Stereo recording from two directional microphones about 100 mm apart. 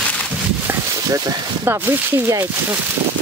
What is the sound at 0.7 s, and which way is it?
Speech, 25° right (ahead or behind).